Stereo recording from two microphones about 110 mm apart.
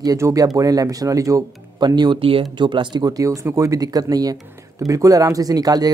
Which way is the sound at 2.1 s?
55° right (ahead or behind).